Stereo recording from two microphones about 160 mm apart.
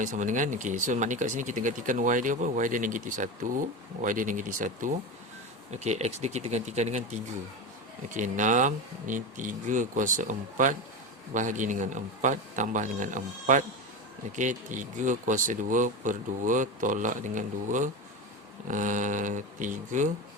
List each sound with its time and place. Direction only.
0.0 s speech: 50° right (ahead or behind)
5.7 s speech: 45° right (ahead or behind)